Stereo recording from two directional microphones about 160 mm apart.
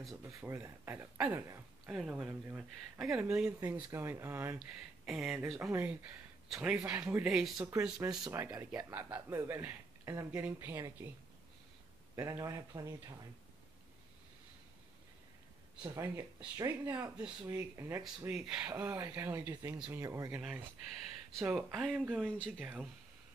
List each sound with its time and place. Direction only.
0.2 s speech: 15° right (ahead or behind)
4.6 s speech: 5° right (ahead or behind)
5.6 s speech: 15° right (ahead or behind)
8.0 s speech: 25° right (ahead or behind)
8.3 s speech: 15° right (ahead or behind)
12.2 s speech: 20° right (ahead or behind)
15.8 s speech: 20° right (ahead or behind)
18.3 s speech: 5° right (ahead or behind)
18.7 s speech: 15° right (ahead or behind)